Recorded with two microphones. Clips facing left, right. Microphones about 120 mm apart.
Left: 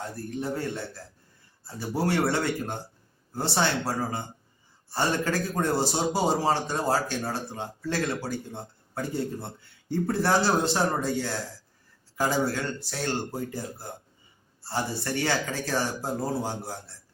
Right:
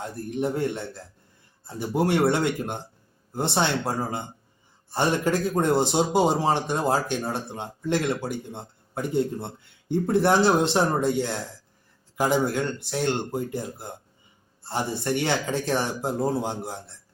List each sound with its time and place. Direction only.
0.3 s a man's voice: 20° right (ahead or behind)